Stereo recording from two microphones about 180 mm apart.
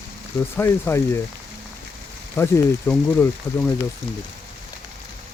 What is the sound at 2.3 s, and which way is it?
Speech, 15° left (ahead or behind).